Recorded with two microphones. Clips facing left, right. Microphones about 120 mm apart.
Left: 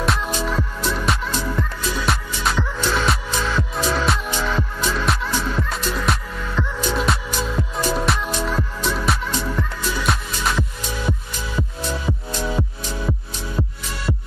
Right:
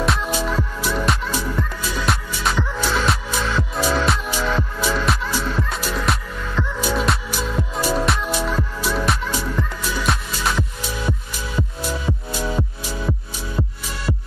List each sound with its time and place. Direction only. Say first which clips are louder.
0.0 s music: right 1 dB; centre (ahead or behind)